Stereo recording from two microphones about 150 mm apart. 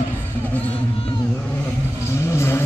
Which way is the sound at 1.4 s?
15° left (ahead or behind).